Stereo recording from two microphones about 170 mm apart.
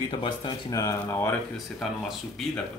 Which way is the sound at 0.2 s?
25° left (ahead or behind).